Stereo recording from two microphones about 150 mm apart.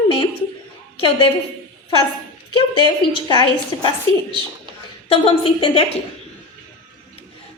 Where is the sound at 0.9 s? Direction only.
35° left (ahead or behind).